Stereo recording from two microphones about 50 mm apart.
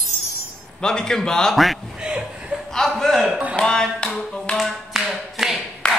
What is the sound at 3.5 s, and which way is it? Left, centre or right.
Tap, centre.